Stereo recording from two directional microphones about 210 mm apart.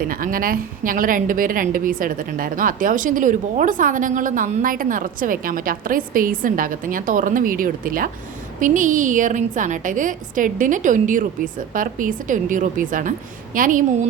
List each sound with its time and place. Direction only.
0.0 s speech: 40° right (ahead or behind)